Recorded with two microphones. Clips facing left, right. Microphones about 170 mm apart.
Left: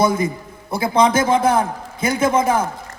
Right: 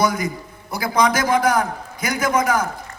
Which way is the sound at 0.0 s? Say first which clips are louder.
Left 3 dB; 25° left (ahead or behind).